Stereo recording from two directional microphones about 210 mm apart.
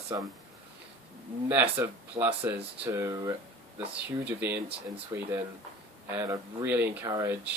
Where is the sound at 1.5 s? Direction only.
10° right (ahead or behind).